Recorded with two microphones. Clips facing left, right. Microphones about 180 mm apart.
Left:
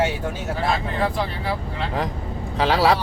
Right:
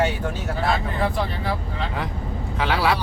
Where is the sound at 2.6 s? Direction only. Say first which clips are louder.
Left 4 dB; 35° left (ahead or behind).